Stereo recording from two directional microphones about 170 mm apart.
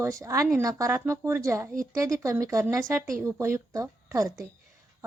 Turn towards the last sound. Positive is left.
turn(degrees=-20)  # may be behind; listen again after turning